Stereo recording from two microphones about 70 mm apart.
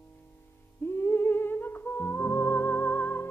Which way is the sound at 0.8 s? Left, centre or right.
Left.